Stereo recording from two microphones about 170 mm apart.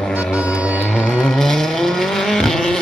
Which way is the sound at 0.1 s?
5° right (ahead or behind).